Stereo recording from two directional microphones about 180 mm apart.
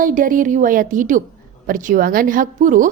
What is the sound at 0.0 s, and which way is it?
A woman's voice, 50° right (ahead or behind).